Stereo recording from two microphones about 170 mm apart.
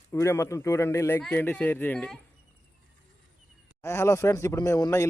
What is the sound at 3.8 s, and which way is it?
A man's voice, 15° left (ahead or behind).